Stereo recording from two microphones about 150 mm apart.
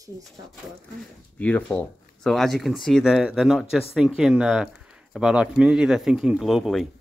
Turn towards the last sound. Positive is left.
turn(degrees=0)  # may be behind; listen again after turning